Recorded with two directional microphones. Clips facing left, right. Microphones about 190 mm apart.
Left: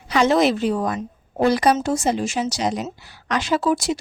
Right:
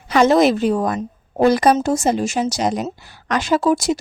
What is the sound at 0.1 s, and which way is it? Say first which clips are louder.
A woman's voice: right 4 dB; 45° right (ahead or behind).